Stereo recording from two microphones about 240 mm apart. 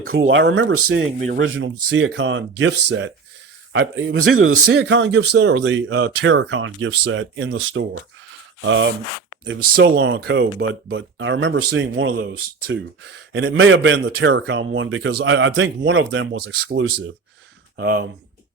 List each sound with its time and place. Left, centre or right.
0.1 s speech: right
4.2 s speech: right
9.5 s speech: right